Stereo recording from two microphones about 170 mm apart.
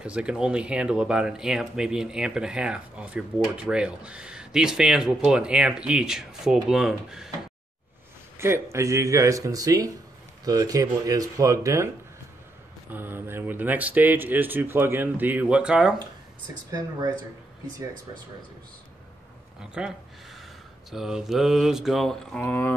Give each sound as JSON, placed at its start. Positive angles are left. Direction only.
{"t": 0.0, "sound": "speech", "side_deg": -5}
{"t": 8.4, "sound": "a man's voice", "side_deg": -15}
{"t": 12.9, "sound": "speech", "side_deg": -10}
{"t": 19.6, "sound": "speech", "side_deg": -5}
{"t": 20.9, "sound": "speech", "side_deg": 0}
{"t": 22.4, "sound": "speech", "side_deg": 10}